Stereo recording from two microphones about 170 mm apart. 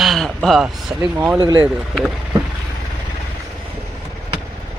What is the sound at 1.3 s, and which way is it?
Speech, 25° right (ahead or behind).